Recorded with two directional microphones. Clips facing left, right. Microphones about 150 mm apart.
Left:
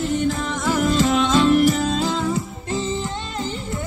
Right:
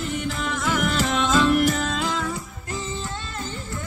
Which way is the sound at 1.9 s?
30° left (ahead or behind).